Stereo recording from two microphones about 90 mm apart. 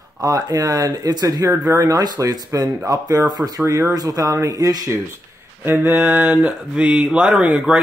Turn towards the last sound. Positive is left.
turn(degrees=-10)  # may be behind; listen again after turning